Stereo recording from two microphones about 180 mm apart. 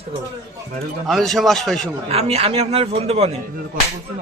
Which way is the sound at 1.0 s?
Centre (ahead or behind).